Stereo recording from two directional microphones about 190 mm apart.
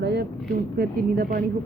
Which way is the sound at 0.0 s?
60° right (ahead or behind).